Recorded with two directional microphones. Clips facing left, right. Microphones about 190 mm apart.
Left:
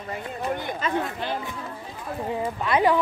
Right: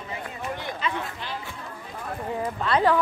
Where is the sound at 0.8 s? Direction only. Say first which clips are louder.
Left 5 dB; 50° left (ahead or behind).